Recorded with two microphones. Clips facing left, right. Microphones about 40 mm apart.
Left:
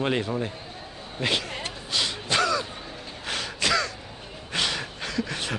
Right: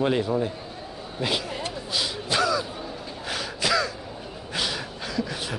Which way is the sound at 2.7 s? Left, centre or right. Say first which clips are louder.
Right 4 dB; centre.